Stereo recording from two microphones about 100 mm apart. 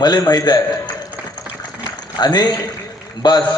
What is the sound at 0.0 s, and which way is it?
Speech, 40° left (ahead or behind).